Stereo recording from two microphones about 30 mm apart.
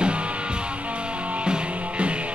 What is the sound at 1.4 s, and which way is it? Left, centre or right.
Music, right.